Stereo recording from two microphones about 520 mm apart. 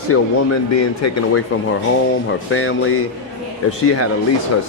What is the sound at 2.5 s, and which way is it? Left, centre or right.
Speech, left.